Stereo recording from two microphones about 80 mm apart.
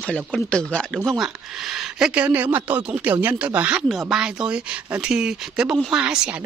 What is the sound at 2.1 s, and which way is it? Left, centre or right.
Speech, right.